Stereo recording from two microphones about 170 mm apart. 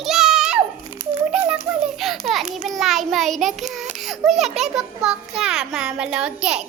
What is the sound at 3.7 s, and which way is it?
A child's voice, centre (ahead or behind).